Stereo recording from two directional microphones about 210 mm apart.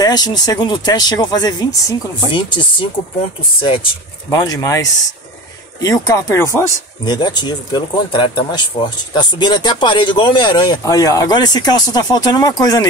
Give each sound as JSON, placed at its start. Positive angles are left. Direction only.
{"t": 0.0, "sound": "speech", "side_deg": 20}